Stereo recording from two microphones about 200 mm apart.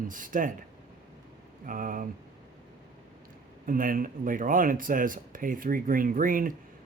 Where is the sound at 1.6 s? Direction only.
45° right (ahead or behind).